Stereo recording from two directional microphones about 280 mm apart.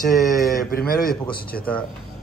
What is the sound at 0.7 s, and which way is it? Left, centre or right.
Speech, left.